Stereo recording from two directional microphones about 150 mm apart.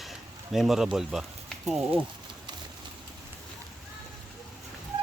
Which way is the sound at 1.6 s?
Centre (ahead or behind).